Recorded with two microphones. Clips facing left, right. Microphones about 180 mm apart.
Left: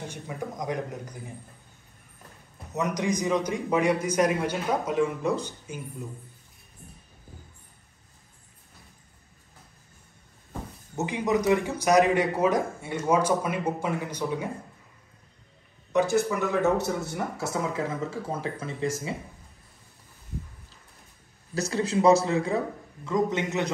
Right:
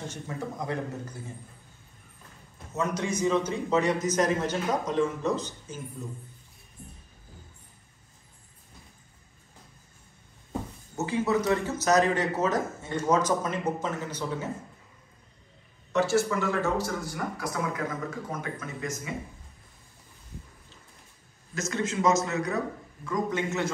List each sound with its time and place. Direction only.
0.1 s a man's voice: 15° left (ahead or behind)
2.7 s a man's voice: 15° left (ahead or behind)
11.0 s a man's voice: 15° left (ahead or behind)
15.9 s speech: 15° left (ahead or behind)
21.5 s a man's voice: 35° left (ahead or behind); by 23.7 s 20° left (ahead or behind)